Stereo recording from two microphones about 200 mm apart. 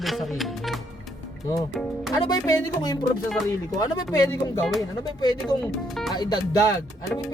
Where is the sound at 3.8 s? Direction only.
20° left (ahead or behind).